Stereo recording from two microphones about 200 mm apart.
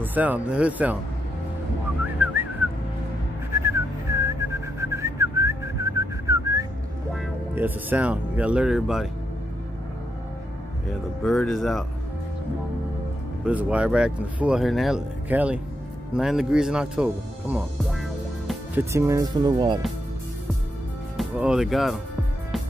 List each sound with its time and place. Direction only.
0.0 s speech: 10° right (ahead or behind)
2.2 s whistling: 10° right (ahead or behind)
7.5 s speech: 10° right (ahead or behind)
10.9 s speech: centre (ahead or behind)
13.5 s speech: 5° right (ahead or behind)
18.8 s speech: 15° right (ahead or behind)
21.2 s speech: 5° right (ahead or behind)